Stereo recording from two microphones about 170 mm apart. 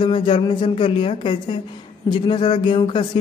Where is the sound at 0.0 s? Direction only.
30° left (ahead or behind).